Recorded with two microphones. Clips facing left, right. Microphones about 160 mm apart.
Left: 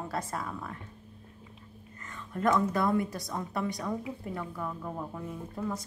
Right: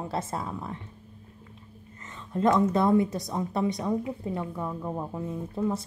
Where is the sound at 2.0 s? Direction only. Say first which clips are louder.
Right 4 dB; 20° right (ahead or behind).